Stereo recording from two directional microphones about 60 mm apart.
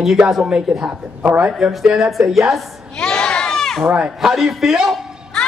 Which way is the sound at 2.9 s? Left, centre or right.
Centre.